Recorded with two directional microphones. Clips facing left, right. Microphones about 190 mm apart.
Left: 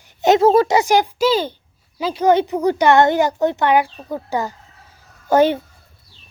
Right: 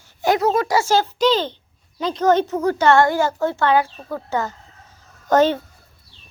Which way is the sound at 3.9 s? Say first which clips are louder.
Left 1 dB; 15° left (ahead or behind).